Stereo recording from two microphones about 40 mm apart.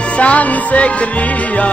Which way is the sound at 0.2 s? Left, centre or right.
Left.